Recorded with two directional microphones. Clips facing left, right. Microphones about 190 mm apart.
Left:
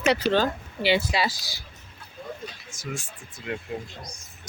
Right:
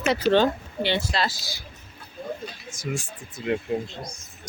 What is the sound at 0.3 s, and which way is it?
Speech, 5° left (ahead or behind).